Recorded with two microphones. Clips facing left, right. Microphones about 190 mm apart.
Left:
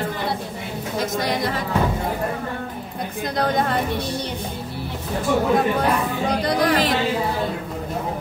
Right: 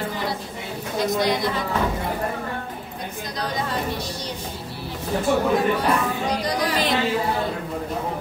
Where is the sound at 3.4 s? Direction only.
60° left (ahead or behind).